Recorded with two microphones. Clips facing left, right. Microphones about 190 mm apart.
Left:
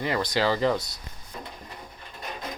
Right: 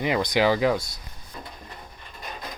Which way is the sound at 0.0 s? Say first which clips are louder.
Right 3 dB; 15° right (ahead or behind).